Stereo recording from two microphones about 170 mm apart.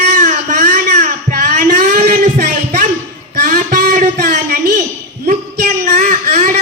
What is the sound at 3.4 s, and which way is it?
Music, 55° right (ahead or behind).